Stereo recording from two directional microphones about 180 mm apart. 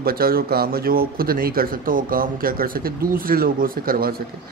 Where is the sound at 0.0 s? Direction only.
55° right (ahead or behind).